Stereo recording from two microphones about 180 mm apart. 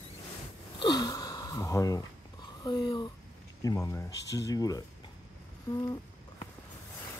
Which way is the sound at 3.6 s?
15° left (ahead or behind).